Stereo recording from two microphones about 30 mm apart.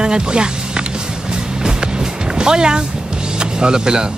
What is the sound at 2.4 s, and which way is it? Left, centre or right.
Speech, right.